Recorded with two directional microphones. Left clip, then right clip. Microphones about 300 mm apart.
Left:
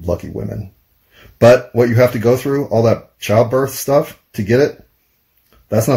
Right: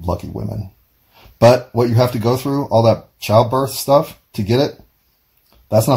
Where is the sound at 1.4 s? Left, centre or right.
Right.